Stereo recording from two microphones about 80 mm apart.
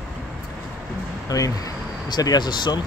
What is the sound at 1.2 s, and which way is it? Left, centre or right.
Speech, left.